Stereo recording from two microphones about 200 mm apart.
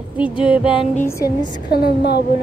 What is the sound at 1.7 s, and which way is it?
Speech, 55° left (ahead or behind).